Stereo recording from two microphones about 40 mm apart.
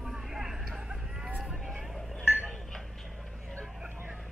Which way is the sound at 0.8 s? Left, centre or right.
Centre.